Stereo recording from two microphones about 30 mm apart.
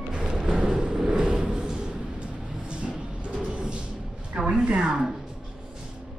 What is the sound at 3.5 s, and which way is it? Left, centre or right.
Music, right.